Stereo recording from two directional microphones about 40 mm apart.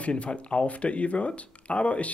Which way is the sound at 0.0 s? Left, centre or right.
Left.